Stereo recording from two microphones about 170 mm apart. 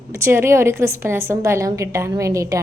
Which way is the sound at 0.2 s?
15° right (ahead or behind).